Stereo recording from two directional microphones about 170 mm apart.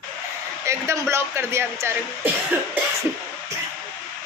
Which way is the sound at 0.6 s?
15° right (ahead or behind).